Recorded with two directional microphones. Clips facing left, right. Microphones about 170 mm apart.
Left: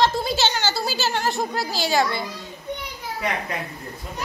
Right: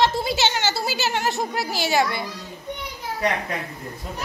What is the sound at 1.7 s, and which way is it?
Speech, 20° right (ahead or behind).